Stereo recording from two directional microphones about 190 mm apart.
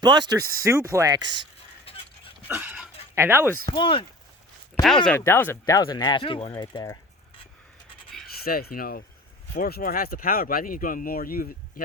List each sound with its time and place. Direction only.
0.0 s speech: 20° right (ahead or behind)
1.9 s dog: 30° left (ahead or behind)
2.5 s a sound: 10° right (ahead or behind)
3.2 s speech: 10° right (ahead or behind)
3.7 s speech: 25° left (ahead or behind)
4.7 s speech: centre (ahead or behind)
5.0 s speech: 10° left (ahead or behind)
8.4 s speech: 50° left (ahead or behind)